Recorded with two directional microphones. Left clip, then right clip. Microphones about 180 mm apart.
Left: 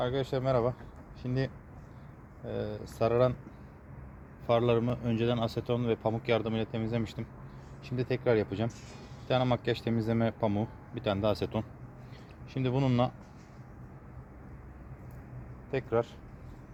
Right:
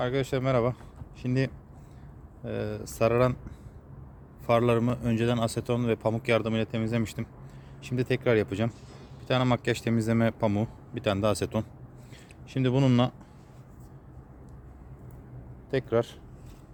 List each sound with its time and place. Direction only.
0.0 s a man's voice: 45° right (ahead or behind)
4.4 s a man's voice: 50° right (ahead or behind)
15.7 s a man's voice: 45° right (ahead or behind)